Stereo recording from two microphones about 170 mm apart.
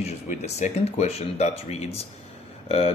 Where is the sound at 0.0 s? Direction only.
40° left (ahead or behind).